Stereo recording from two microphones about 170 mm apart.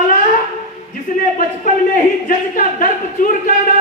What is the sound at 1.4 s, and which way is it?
Speech, 50° left (ahead or behind).